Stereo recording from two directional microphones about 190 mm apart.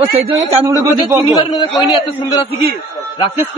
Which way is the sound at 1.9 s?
30° left (ahead or behind).